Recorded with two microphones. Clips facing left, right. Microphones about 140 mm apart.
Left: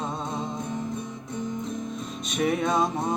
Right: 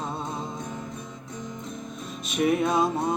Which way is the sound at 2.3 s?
5° right (ahead or behind).